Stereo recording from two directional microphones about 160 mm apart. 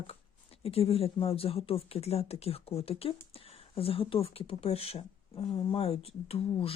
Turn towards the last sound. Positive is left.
turn(degrees=35)  # may be behind; listen again after turning